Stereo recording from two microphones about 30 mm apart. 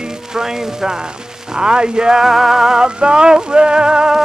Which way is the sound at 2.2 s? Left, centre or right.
Centre.